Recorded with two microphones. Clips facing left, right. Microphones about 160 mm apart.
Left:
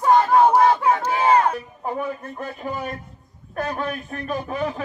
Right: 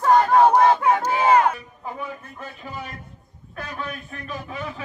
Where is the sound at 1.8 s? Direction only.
45° left (ahead or behind).